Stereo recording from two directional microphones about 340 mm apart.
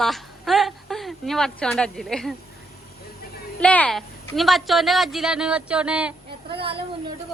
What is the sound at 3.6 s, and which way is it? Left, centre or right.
A woman's voice, centre.